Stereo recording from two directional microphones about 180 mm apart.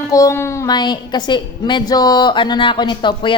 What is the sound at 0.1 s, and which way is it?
A woman's voice, 15° left (ahead or behind).